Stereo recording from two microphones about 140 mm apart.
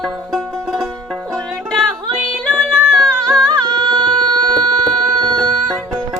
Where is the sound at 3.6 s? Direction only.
30° right (ahead or behind).